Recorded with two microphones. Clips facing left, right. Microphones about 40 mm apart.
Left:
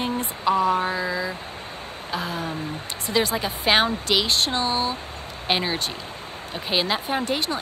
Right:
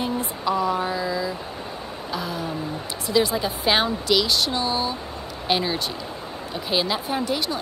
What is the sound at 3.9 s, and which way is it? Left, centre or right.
Speech, left.